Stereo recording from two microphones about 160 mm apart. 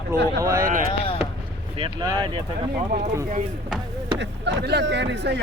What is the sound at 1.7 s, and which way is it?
Speech, 30° right (ahead or behind).